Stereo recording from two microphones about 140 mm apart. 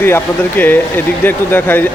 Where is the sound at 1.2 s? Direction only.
15° left (ahead or behind).